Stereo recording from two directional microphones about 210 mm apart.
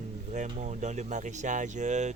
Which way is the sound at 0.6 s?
35° right (ahead or behind).